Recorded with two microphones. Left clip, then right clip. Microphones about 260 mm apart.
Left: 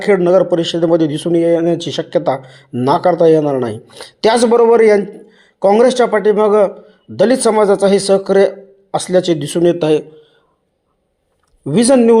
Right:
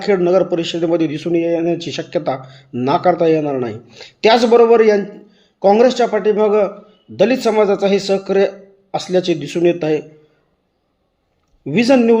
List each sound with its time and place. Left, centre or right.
0.0 s speech: left
11.6 s speech: left